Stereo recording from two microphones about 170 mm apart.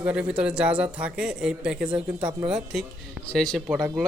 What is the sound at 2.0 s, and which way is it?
Speech, 15° right (ahead or behind).